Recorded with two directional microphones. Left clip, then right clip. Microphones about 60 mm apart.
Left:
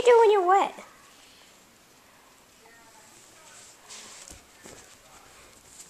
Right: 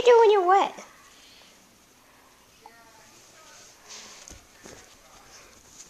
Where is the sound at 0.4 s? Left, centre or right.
Centre.